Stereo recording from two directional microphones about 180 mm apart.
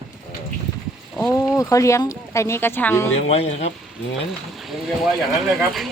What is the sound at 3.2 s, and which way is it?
Speech, 35° left (ahead or behind).